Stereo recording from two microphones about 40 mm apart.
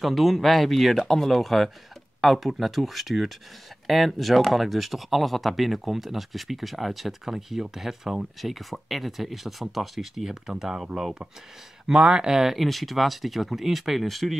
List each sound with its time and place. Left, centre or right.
0.0 s speech: centre
11.9 s speech: centre
12.4 s speech: centre